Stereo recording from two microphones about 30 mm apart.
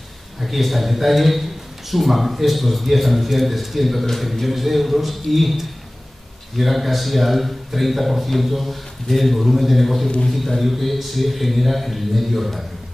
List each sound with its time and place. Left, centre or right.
0.4 s a man's voice: centre